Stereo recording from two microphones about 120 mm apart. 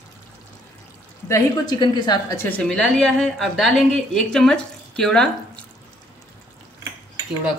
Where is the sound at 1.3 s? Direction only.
40° left (ahead or behind).